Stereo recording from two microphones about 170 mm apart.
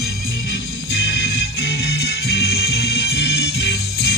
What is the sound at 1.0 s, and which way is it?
Music, 85° left.